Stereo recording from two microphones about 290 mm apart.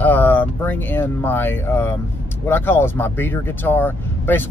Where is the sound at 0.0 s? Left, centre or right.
Centre.